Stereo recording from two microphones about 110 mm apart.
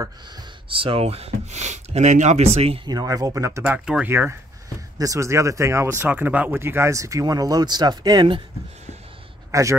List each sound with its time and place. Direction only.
0.7 s speech: 55° right (ahead or behind)
2.8 s speech: 35° right (ahead or behind)
3.6 s speech: 15° right (ahead or behind)
4.9 s speech: 30° right (ahead or behind)
9.5 s a man's voice: 30° right (ahead or behind)